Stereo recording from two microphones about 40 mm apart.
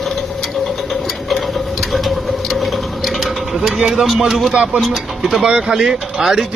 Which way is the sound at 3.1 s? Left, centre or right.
Centre.